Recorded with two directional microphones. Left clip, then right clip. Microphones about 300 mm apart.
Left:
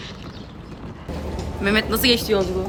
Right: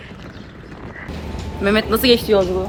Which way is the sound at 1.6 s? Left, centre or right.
Centre.